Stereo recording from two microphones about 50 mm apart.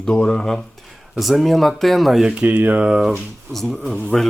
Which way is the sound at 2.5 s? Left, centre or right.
Right.